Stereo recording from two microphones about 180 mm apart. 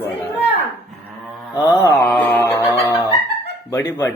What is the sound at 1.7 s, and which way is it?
Music, 15° left (ahead or behind).